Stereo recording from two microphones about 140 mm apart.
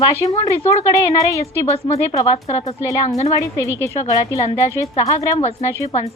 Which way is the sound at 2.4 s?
50° left (ahead or behind).